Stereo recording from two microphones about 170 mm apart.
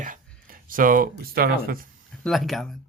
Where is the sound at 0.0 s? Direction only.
55° right (ahead or behind).